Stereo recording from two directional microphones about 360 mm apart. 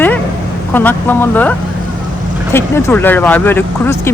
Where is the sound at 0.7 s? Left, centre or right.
Centre.